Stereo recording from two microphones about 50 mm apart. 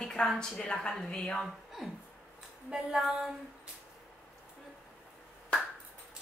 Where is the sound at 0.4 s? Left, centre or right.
Centre.